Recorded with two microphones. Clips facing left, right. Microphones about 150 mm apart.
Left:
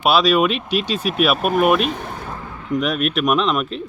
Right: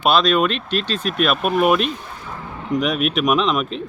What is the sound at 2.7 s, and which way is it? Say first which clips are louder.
Speech: even; centre (ahead or behind).